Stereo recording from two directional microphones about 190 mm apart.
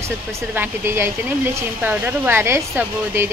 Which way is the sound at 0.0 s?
15° right (ahead or behind).